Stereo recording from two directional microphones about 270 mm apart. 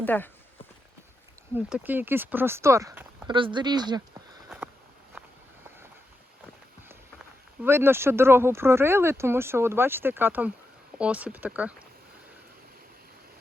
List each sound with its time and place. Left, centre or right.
0.0 s speech: centre
1.5 s speech: centre
4.4 s a sound: centre
7.6 s speech: centre